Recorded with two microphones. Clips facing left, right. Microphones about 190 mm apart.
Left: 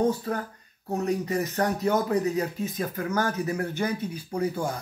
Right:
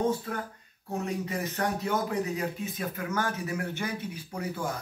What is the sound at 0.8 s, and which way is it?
Speech, 40° left (ahead or behind).